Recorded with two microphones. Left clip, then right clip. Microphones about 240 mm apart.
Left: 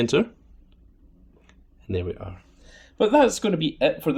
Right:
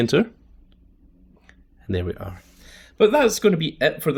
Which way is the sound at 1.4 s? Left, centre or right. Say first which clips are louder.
Right 4 dB; right.